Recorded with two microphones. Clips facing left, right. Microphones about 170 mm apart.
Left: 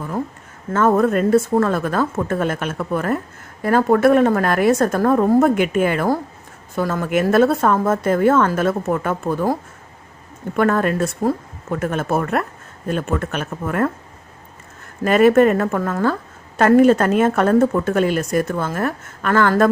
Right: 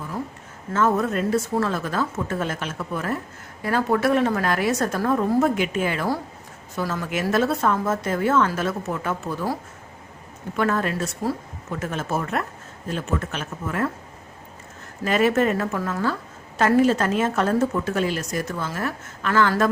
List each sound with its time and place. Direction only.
0.7 s a woman's voice: 55° left (ahead or behind)
10.6 s a woman's voice: 55° left (ahead or behind)
15.0 s a woman's voice: 55° left (ahead or behind)